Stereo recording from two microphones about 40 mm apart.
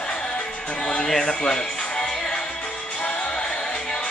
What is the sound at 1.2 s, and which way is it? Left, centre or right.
Music, centre.